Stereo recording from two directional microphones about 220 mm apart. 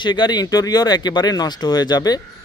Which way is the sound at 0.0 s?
20° left (ahead or behind).